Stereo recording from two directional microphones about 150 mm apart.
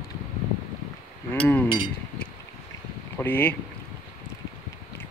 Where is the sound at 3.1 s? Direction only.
10° left (ahead or behind).